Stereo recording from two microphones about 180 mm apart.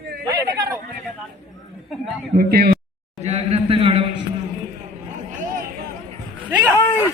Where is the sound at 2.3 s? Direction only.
60° right (ahead or behind).